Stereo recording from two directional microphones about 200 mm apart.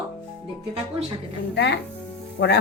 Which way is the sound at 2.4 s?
70° left (ahead or behind).